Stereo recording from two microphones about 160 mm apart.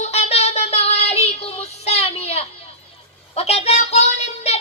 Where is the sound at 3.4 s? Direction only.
40° left (ahead or behind).